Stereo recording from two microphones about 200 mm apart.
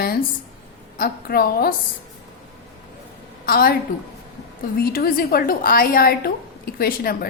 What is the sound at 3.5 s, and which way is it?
Speech, 50° left (ahead or behind).